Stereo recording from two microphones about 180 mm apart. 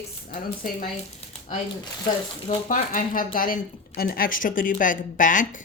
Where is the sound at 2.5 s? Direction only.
45° left (ahead or behind).